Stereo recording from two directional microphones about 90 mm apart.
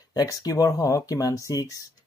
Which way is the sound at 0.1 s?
45° left (ahead or behind).